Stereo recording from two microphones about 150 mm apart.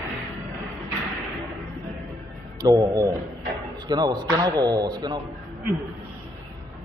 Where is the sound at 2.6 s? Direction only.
25° right (ahead or behind).